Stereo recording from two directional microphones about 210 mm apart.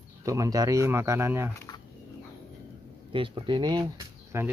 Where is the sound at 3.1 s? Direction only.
25° right (ahead or behind).